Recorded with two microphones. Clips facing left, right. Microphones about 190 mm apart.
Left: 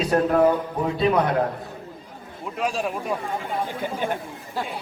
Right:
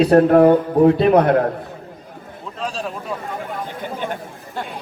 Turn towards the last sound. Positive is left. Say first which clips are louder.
# even
turn(degrees=5)  # may be behind; listen again after turning